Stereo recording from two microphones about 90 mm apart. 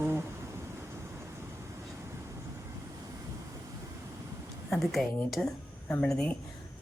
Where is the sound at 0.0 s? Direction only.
25° right (ahead or behind).